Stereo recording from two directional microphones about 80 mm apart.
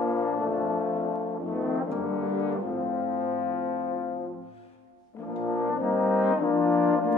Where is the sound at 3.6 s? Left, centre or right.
Left.